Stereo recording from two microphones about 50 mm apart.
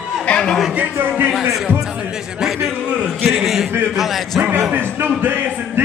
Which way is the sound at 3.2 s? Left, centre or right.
Centre.